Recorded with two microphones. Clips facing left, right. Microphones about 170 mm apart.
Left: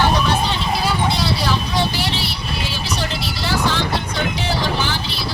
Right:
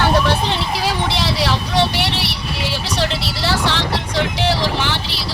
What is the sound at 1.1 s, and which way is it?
Vehicle, 75° right (ahead or behind).